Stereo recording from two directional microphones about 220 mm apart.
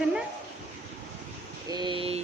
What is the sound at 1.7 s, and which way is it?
Speech, 20° right (ahead or behind).